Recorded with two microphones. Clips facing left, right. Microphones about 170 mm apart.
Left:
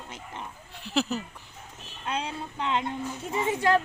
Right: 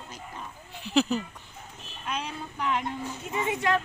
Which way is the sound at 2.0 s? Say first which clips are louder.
Left 2 dB; 30° left (ahead or behind).